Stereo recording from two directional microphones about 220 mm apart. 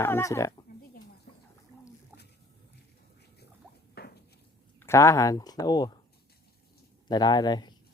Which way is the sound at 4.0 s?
45° left (ahead or behind).